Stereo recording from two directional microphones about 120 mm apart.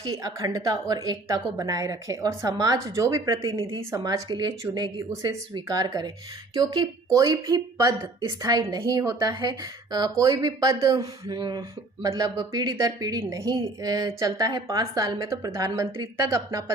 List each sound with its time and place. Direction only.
0.0 s speech: 30° right (ahead or behind)